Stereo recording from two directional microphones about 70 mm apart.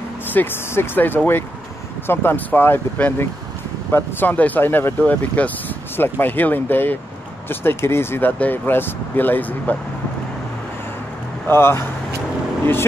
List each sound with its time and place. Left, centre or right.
0.3 s speech: left
5.9 s speech: left
11.4 s speech: left